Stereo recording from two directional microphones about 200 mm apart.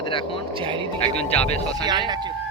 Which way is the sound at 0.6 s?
25° right (ahead or behind).